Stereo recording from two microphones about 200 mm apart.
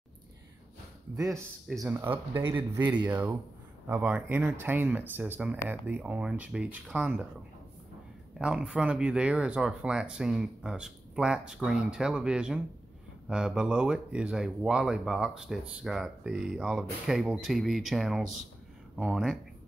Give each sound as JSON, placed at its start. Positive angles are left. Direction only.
{"t": 1.1, "sound": "speech", "side_deg": -15}
{"t": 2.5, "sound": "speech", "side_deg": -10}
{"t": 8.4, "sound": "speech", "side_deg": -5}